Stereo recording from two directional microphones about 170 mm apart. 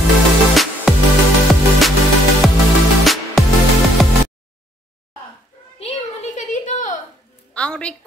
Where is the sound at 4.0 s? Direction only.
Centre (ahead or behind).